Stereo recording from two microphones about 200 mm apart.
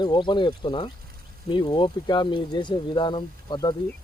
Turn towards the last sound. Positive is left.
turn(degrees=20)  # may be behind; listen again after turning